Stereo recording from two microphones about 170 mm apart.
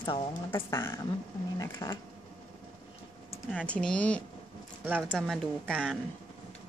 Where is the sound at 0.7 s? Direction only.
15° left (ahead or behind).